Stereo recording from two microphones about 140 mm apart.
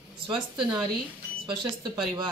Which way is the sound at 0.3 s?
35° right (ahead or behind).